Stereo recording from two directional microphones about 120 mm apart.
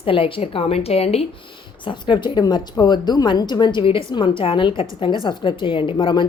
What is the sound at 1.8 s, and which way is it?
A woman's voice, 40° left (ahead or behind).